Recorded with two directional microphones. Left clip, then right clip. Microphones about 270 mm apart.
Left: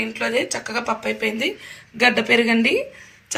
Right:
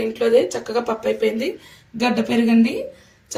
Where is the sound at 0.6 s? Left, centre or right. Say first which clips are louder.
Right 2 dB; left.